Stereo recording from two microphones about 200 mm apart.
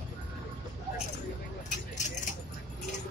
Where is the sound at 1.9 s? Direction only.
35° left (ahead or behind).